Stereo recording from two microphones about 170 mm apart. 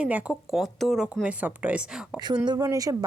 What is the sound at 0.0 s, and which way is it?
Speech, 5° right (ahead or behind).